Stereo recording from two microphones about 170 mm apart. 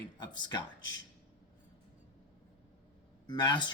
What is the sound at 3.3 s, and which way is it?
Speech, 25° left (ahead or behind).